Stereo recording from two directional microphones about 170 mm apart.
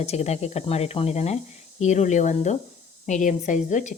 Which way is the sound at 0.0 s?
40° left (ahead or behind).